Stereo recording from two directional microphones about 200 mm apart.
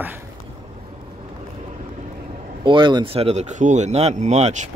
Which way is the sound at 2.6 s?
25° right (ahead or behind).